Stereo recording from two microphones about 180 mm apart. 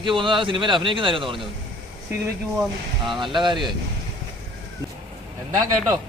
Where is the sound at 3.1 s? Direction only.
25° right (ahead or behind).